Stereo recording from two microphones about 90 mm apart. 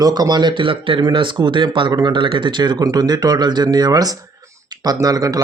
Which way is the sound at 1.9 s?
45° right (ahead or behind).